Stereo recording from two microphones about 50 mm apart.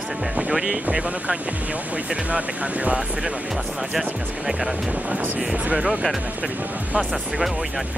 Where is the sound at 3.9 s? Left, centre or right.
Centre.